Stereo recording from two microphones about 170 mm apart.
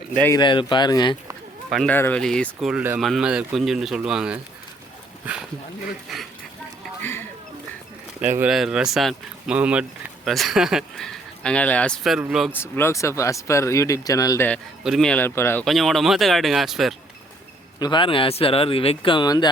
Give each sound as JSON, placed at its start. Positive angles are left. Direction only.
{"t": 0.3, "sound": "speech", "side_deg": 30}
{"t": 1.7, "sound": "speech", "side_deg": 0}
{"t": 6.1, "sound": "speech", "side_deg": 0}
{"t": 7.0, "sound": "a sound", "side_deg": 15}
{"t": 8.4, "sound": "speech", "side_deg": -5}
{"t": 12.5, "sound": "speech", "side_deg": 15}
{"t": 14.8, "sound": "speech", "side_deg": 0}
{"t": 15.6, "sound": "speech", "side_deg": 0}
{"t": 17.7, "sound": "speech", "side_deg": 25}